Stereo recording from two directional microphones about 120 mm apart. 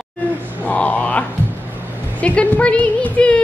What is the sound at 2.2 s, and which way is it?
Speech, 10° left (ahead or behind).